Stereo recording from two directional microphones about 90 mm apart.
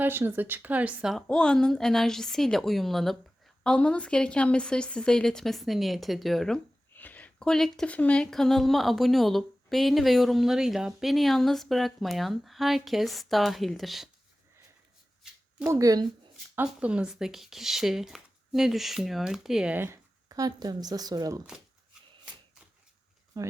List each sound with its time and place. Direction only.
0.0 s speech: 25° right (ahead or behind)
1.3 s speech: 10° left (ahead or behind)
6.9 s a sound: 20° left (ahead or behind)
7.9 s speech: 15° left (ahead or behind); by 14.1 s centre (ahead or behind)
15.6 s speech: 40° right (ahead or behind)
16.8 s speech: 10° right (ahead or behind)
19.7 s speech: 25° right (ahead or behind)
20.2 s speech: 45° right (ahead or behind)
23.3 s speech: 40° right (ahead or behind)